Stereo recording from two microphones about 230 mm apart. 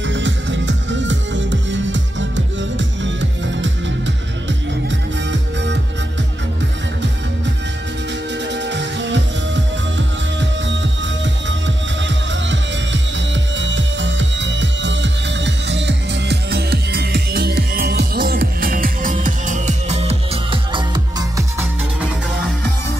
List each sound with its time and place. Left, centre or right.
0.0 s music: right
8.5 s music: right; by 21.6 s centre